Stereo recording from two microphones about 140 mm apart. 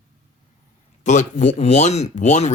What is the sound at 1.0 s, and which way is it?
Speech, 60° left (ahead or behind).